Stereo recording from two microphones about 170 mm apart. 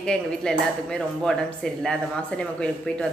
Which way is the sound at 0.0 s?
5° left (ahead or behind).